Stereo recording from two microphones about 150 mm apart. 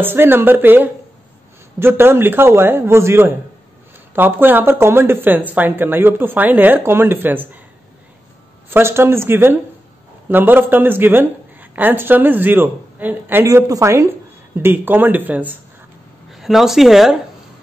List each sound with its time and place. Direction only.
0.0 s a woman's voice: 15° right (ahead or behind)
8.6 s a woman's voice: 15° right (ahead or behind)
16.3 s speech: centre (ahead or behind)